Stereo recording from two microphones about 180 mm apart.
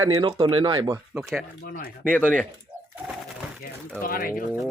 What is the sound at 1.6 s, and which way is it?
Speech, 55° left (ahead or behind).